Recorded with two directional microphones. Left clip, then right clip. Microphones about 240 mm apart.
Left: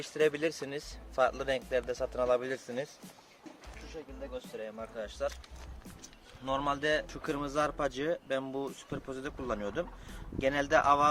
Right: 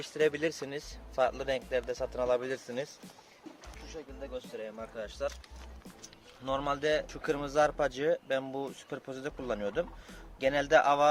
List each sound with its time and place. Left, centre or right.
0.0 s a man's voice: centre
6.4 s a man's voice: centre
7.1 s speech: centre